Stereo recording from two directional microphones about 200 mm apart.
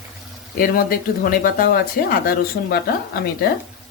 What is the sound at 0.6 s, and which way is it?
Speech, 45° left (ahead or behind).